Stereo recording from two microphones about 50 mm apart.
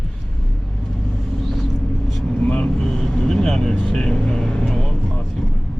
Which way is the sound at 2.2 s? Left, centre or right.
Left.